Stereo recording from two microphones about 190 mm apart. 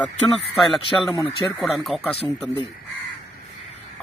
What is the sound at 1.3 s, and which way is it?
Speech, centre (ahead or behind).